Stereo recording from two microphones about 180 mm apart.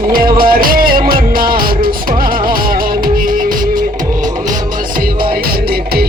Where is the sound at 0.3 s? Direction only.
55° right (ahead or behind).